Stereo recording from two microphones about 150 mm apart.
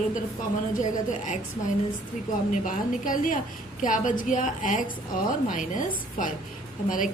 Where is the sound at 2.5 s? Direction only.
65° left (ahead or behind).